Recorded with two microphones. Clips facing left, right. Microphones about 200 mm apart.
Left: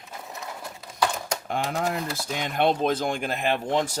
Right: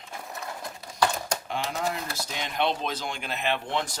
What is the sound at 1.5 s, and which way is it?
Speech, 50° left (ahead or behind).